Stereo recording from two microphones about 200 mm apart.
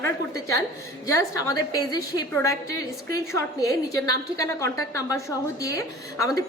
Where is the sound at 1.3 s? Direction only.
15° left (ahead or behind).